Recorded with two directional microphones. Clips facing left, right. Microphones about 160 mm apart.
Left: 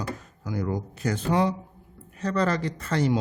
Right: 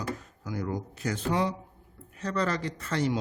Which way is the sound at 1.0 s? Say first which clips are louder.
Left 4 dB; 55° left (ahead or behind).